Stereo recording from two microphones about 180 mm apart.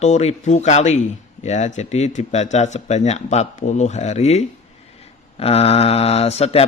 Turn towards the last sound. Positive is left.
turn(degrees=35)  # may be behind; listen again after turning